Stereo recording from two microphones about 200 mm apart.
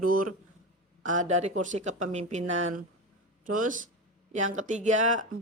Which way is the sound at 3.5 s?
40° right (ahead or behind).